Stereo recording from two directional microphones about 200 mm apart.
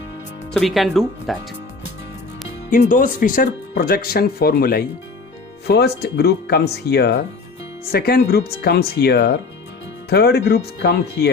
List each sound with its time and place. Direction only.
0.5 s speech: centre (ahead or behind)
2.9 s speech: 40° left (ahead or behind); by 11.3 s 60° left (ahead or behind)